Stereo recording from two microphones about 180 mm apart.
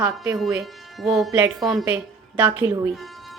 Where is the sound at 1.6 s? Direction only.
Centre (ahead or behind).